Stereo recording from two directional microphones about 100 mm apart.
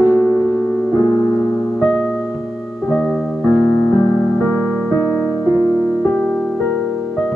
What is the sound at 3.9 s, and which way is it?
Music, 35° left (ahead or behind).